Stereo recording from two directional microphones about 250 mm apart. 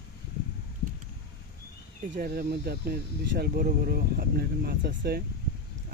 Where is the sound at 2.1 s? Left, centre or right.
Right.